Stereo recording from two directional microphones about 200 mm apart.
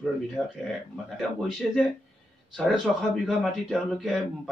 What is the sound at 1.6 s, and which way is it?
Speech, centre (ahead or behind).